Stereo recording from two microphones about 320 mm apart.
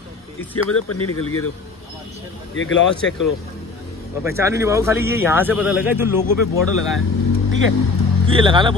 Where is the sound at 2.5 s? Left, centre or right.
Left.